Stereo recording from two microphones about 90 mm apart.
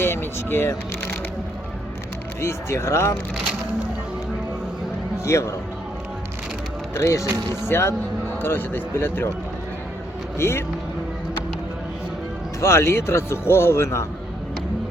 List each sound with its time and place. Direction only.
0.0 s speech: 25° left (ahead or behind)
2.4 s speech: 30° left (ahead or behind)
5.2 s speech: 35° left (ahead or behind)
6.9 s speech: 30° left (ahead or behind)
10.3 s speech: 30° left (ahead or behind)
12.5 s speech: 30° left (ahead or behind)